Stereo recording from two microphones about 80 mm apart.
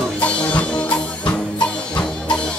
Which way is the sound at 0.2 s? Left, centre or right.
Centre.